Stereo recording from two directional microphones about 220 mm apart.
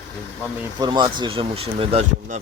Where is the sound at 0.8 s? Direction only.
20° right (ahead or behind).